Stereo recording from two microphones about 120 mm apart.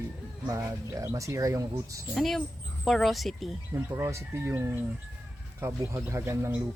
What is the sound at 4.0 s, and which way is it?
Speech, 25° right (ahead or behind).